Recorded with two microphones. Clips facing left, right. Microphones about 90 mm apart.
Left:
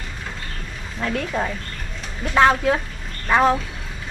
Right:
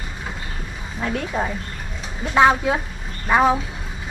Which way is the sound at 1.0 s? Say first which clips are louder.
Even; 5° right (ahead or behind).